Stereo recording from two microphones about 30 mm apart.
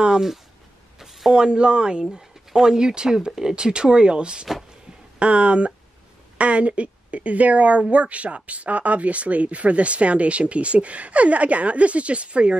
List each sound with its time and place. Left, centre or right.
1.3 s speech: right
5.2 s speech: right